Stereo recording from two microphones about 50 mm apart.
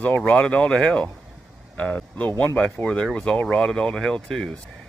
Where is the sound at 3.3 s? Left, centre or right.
Left.